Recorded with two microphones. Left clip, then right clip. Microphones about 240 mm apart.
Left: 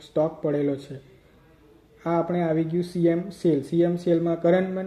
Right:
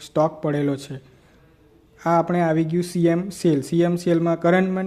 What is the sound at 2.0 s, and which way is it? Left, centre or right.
A man's voice, right.